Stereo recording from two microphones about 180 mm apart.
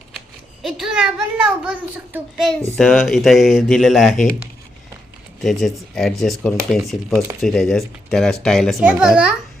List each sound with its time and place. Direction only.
0.6 s speech: 5° right (ahead or behind)
5.4 s speech: centre (ahead or behind)